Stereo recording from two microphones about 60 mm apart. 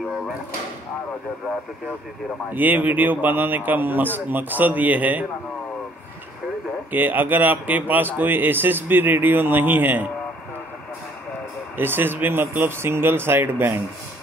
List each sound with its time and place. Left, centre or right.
2.5 s a man's voice: right
6.9 s speech: right
11.7 s speech: right